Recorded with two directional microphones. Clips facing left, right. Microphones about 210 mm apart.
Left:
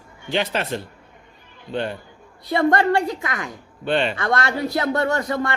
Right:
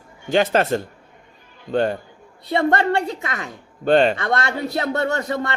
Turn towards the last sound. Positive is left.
turn(degrees=-25)  # may be behind; listen again after turning